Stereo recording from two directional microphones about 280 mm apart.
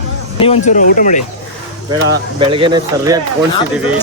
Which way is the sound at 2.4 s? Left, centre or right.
Centre.